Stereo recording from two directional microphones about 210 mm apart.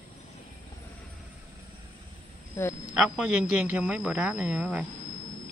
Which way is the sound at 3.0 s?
5° right (ahead or behind).